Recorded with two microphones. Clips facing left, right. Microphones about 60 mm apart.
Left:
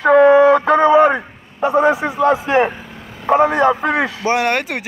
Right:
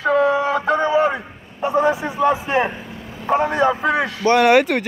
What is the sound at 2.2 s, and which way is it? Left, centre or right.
Speech, left.